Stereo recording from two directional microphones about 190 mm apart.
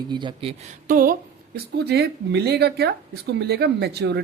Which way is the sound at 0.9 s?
45° right (ahead or behind).